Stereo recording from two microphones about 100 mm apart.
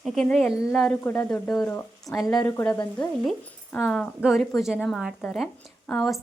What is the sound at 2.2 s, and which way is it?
Speech, 40° left (ahead or behind).